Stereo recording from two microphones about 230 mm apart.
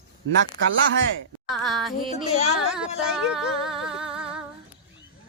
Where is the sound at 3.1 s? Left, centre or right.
Centre.